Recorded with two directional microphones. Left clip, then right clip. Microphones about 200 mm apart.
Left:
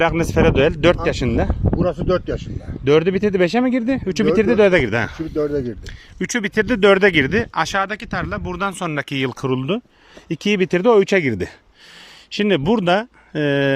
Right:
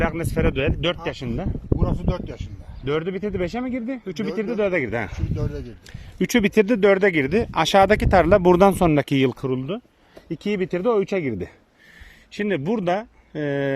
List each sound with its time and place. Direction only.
0.0 s speech: 10° left (ahead or behind)
1.8 s speech: 45° left (ahead or behind)
2.8 s speech: 20° left (ahead or behind)
4.8 s speech: centre (ahead or behind)
5.4 s speech: 40° left (ahead or behind)
6.1 s speech: 10° right (ahead or behind)
6.7 s speech: 5° left (ahead or behind); by 9.4 s 15° right (ahead or behind)
9.4 s speech: 10° left (ahead or behind)